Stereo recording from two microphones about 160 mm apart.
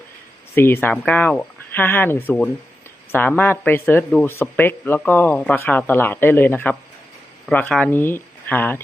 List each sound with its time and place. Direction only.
0.5 s speech: 15° left (ahead or behind)